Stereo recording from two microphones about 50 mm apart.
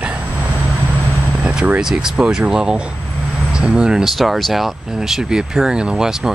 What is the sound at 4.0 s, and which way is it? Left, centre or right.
Speech, centre.